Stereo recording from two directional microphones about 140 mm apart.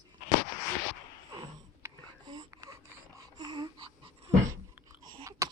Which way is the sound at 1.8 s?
20° right (ahead or behind).